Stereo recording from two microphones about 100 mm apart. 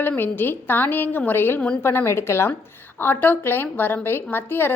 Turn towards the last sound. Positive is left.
turn(degrees=20)  # may be behind; listen again after turning